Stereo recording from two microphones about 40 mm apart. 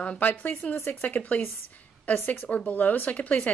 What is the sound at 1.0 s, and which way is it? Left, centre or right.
A woman's voice, left.